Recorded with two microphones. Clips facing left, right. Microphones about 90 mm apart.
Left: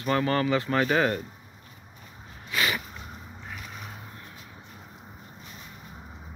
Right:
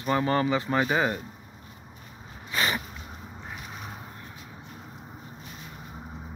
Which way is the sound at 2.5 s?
30° right (ahead or behind).